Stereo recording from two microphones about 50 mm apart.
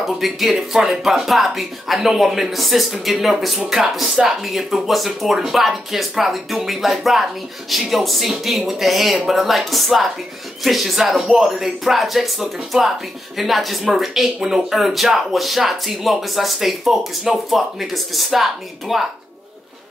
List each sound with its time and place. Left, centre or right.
0.0 s speech: centre